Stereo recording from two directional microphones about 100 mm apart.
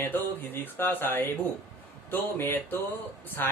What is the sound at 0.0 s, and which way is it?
Music, 20° left (ahead or behind).